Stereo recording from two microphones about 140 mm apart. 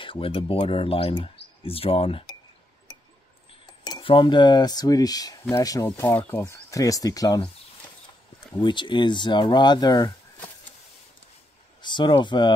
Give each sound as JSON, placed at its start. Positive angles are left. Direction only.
{"t": 0.0, "sound": "speech", "side_deg": 40}
{"t": 3.8, "sound": "speech", "side_deg": 35}
{"t": 5.9, "sound": "speech", "side_deg": 15}
{"t": 8.5, "sound": "speech", "side_deg": 35}
{"t": 11.8, "sound": "speech", "side_deg": 35}